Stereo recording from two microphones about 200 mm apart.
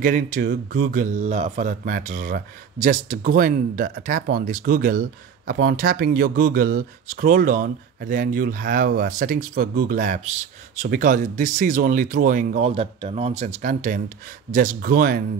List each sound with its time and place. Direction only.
0.0 s speech: 45° right (ahead or behind)